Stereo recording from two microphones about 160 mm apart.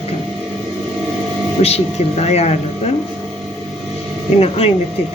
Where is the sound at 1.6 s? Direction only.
40° left (ahead or behind).